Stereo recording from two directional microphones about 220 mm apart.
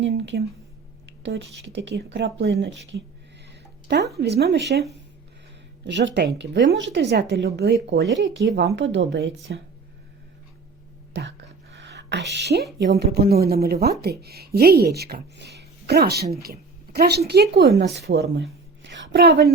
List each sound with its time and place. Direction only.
0.0 s a woman's voice: 50° right (ahead or behind)
11.1 s a sound: 55° right (ahead or behind)
12.8 s a woman's voice: 50° right (ahead or behind)